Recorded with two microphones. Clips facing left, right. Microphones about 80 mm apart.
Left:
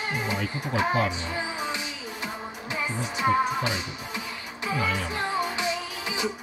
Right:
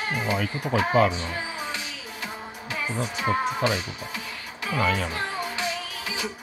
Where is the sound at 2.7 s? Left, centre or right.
Left.